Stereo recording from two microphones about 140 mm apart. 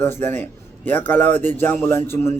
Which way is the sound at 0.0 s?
15° left (ahead or behind).